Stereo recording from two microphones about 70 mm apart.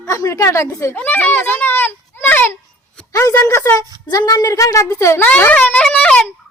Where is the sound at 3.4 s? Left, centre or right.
Left.